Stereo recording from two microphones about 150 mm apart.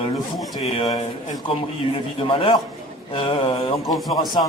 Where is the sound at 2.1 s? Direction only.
35° left (ahead or behind).